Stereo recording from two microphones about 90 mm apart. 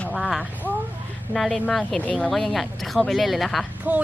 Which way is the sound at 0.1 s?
Centre (ahead or behind).